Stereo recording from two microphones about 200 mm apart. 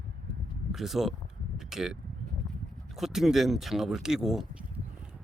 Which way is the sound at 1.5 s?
Centre (ahead or behind).